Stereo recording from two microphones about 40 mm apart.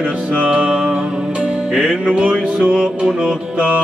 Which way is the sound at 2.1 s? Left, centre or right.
Right.